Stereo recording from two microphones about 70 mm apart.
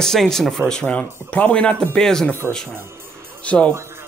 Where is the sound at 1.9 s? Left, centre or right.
Centre.